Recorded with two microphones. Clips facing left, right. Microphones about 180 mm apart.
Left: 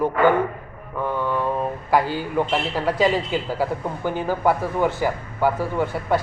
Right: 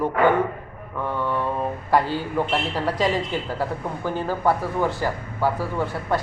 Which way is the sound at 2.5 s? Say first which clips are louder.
Left 2 dB; 5° left (ahead or behind).